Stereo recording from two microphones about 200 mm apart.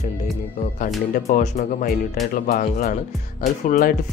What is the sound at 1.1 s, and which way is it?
Speech, 40° left (ahead or behind).